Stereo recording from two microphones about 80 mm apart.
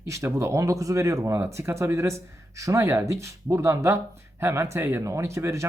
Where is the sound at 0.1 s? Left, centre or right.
Right.